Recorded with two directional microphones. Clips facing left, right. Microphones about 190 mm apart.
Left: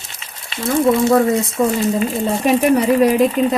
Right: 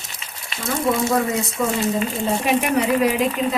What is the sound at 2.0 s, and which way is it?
Speech, 40° left (ahead or behind).